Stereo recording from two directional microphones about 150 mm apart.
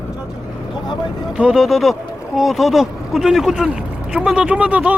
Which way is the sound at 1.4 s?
5° right (ahead or behind).